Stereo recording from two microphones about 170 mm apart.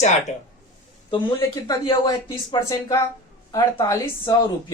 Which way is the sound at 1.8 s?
25° left (ahead or behind).